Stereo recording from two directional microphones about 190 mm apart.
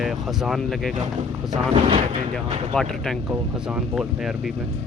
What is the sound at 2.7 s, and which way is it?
Speech, centre (ahead or behind).